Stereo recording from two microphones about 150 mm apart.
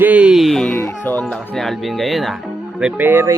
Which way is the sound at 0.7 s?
10° left (ahead or behind).